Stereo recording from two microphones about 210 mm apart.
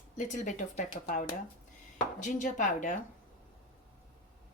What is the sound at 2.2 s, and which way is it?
Speech, 35° left (ahead or behind).